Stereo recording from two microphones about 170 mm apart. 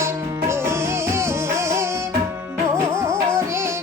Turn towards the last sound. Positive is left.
turn(degrees=-15)  # may be behind; listen again after turning